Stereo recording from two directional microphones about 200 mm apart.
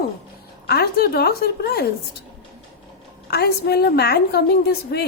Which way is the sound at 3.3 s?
55° left (ahead or behind).